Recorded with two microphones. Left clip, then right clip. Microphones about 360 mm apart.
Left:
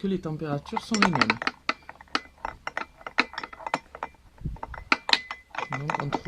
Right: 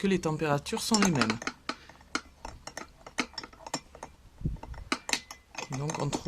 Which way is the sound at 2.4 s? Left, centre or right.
Left.